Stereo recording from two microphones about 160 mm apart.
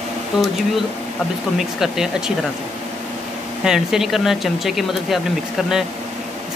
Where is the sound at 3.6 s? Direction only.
5° right (ahead or behind).